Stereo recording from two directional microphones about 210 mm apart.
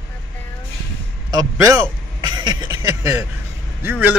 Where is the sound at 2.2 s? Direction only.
20° right (ahead or behind).